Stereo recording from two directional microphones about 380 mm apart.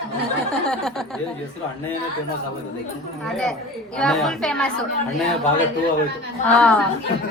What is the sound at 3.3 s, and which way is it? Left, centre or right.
A woman's voice, centre.